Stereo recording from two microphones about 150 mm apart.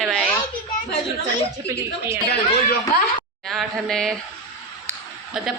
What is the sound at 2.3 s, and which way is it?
Speech, 80° left.